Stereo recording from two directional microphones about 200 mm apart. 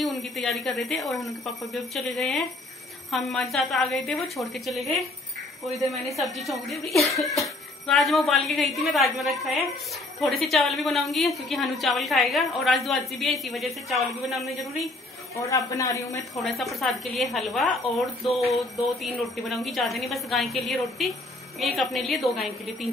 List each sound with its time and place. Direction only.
0.0 s a woman's voice: centre (ahead or behind)
15.3 s a woman's voice: 15° left (ahead or behind)
16.3 s a woman's voice: centre (ahead or behind)